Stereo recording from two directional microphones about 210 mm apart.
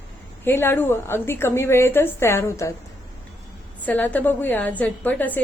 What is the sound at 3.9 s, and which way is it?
A woman's voice, 10° left (ahead or behind).